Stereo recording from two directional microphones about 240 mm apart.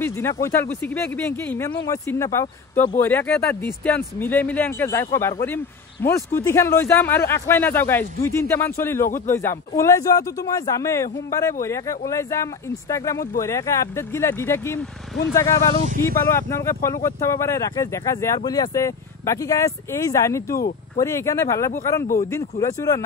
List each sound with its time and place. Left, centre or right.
0.0 s speech: centre
15.7 s speech: right
16.3 s speech: centre
20.5 s speech: left
21.0 s speech: centre